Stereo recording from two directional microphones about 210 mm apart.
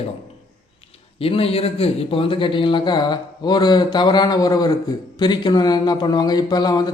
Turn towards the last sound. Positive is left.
turn(degrees=20)  # may be behind; listen again after turning